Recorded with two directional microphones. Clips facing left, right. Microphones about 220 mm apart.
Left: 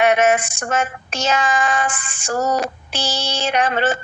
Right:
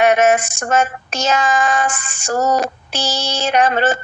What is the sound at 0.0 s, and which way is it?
Child singing, 45° right (ahead or behind).